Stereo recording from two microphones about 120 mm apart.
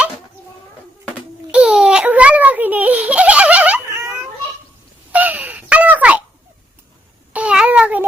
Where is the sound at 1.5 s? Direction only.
5° right (ahead or behind).